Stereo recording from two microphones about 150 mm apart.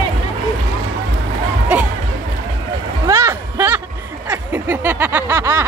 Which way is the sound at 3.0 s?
20° right (ahead or behind).